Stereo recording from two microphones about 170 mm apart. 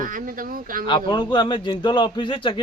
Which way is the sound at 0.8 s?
25° left (ahead or behind).